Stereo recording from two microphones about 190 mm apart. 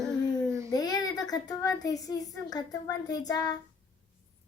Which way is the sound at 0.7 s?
20° left (ahead or behind).